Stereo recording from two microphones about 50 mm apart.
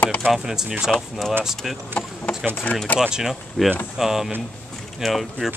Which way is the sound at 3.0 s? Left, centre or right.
Centre.